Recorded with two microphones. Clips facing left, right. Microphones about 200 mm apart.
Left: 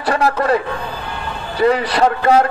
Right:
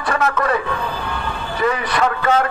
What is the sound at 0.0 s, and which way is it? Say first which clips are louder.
Speech: left 3 dB; 35° left (ahead or behind).